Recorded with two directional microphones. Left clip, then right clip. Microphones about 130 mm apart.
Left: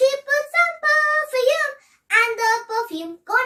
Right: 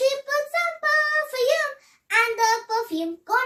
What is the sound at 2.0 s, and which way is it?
Child singing, 20° left (ahead or behind).